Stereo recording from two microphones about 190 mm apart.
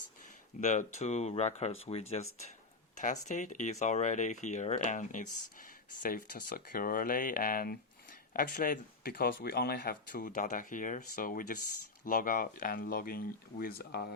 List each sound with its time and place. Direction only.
0.6 s speech: 40° left (ahead or behind); by 14.1 s 55° left (ahead or behind)